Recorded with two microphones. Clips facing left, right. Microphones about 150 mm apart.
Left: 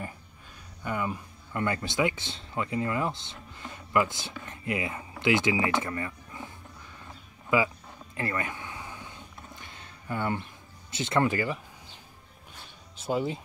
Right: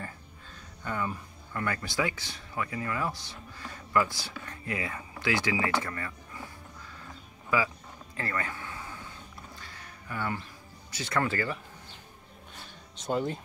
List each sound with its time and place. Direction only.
0.8 s speech: 15° left (ahead or behind)
8.2 s a sound: 20° left (ahead or behind)
10.9 s speech: 20° left (ahead or behind)
12.9 s speech: 5° left (ahead or behind)